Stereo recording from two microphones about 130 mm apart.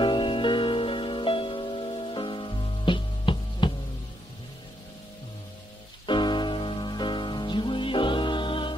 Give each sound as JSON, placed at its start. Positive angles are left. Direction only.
{"t": 0.0, "sound": "music", "side_deg": 40}
{"t": 6.0, "sound": "music", "side_deg": 35}